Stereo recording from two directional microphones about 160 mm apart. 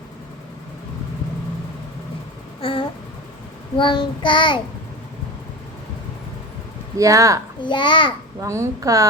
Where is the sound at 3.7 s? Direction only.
30° left (ahead or behind).